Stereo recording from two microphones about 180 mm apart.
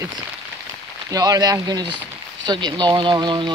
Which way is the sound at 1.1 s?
20° right (ahead or behind).